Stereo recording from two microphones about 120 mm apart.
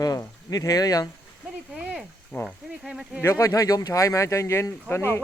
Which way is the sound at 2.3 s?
20° left (ahead or behind).